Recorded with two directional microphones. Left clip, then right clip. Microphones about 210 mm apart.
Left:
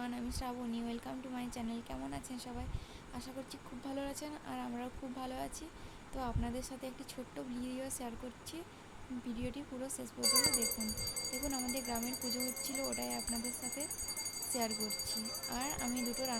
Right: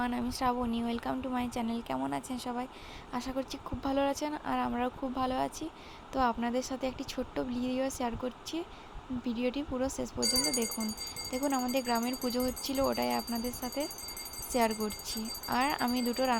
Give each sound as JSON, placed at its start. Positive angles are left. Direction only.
{"t": 0.0, "sound": "speech", "side_deg": -25}
{"t": 9.2, "sound": "speech", "side_deg": -20}
{"t": 10.2, "sound": "speech", "side_deg": 5}
{"t": 11.4, "sound": "speech", "side_deg": -15}